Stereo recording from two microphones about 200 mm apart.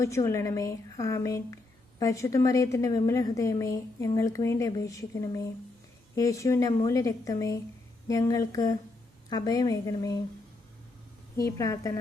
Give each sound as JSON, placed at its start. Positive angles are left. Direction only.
{"t": 0.0, "sound": "a woman's voice", "side_deg": 15}
{"t": 11.3, "sound": "a woman's voice", "side_deg": 15}